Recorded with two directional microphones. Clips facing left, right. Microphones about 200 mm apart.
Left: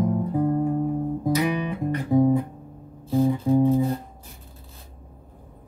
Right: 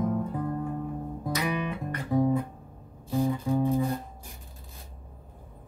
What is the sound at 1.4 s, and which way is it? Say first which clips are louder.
Music: left 6 dB; 15° left (ahead or behind).